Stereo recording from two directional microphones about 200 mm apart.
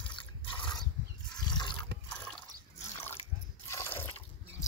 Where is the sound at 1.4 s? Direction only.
20° left (ahead or behind).